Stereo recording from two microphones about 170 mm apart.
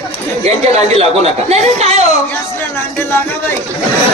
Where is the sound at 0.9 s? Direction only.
40° right (ahead or behind).